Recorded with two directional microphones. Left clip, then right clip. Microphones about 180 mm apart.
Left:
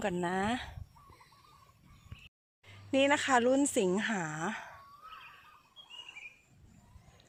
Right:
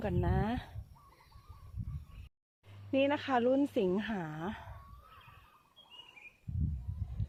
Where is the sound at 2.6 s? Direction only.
5° left (ahead or behind).